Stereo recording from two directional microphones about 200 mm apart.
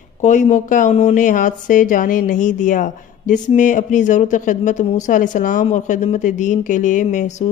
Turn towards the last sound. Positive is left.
turn(degrees=35)  # may be behind; listen again after turning